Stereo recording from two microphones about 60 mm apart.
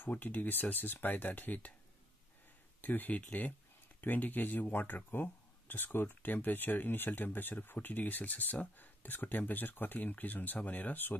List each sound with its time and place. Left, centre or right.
0.0 s speech: left
2.8 s speech: left